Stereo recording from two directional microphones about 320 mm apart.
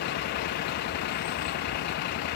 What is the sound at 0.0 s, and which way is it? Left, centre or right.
Vehicle, left.